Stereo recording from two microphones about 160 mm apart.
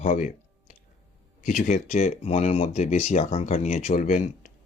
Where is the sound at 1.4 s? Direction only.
50° left (ahead or behind).